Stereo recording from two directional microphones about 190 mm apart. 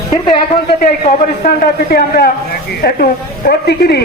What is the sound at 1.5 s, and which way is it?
A woman's voice, 55° left (ahead or behind).